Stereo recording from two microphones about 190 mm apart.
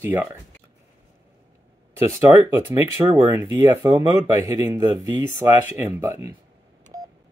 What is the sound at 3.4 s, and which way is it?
Speech, 15° right (ahead or behind).